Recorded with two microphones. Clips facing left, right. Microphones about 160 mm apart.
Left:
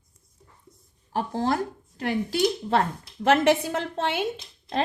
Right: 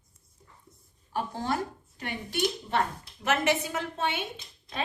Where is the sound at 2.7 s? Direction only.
65° left (ahead or behind).